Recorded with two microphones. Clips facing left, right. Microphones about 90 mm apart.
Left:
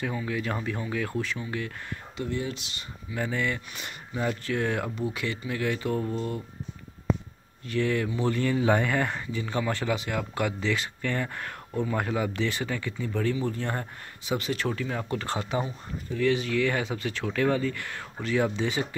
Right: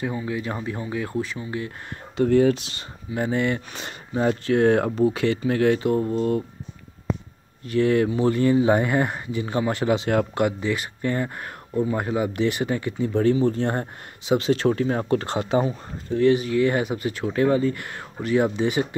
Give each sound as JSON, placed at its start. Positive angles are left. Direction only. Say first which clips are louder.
{"t": 0.0, "sound": "speech", "louder": "right 3 dB", "side_deg": -20}
{"t": 2.2, "sound": "speech", "louder": "right 14 dB", "side_deg": -70}
{"t": 2.5, "sound": "speech", "louder": "right 6 dB", "side_deg": -40}
{"t": 3.2, "sound": "speech", "louder": "right 6 dB", "side_deg": -30}
{"t": 6.1, "sound": "speech", "louder": "right 9 dB", "side_deg": -45}
{"t": 7.6, "sound": "speech", "louder": "right 7 dB", "side_deg": -50}
{"t": 8.1, "sound": "speech", "louder": "right 7 dB", "side_deg": -20}
{"t": 10.0, "sound": "speech", "louder": "right 9 dB", "side_deg": -45}
{"t": 10.4, "sound": "speech", "louder": "right 5 dB", "side_deg": -15}
{"t": 11.7, "sound": "speech", "louder": "right 5 dB", "side_deg": -10}
{"t": 15.2, "sound": "speech", "louder": "right 7 dB", "side_deg": -25}
{"t": 15.6, "sound": "speech", "louder": "right 7 dB", "side_deg": -40}
{"t": 18.5, "sound": "speech", "louder": "right 6 dB", "side_deg": -15}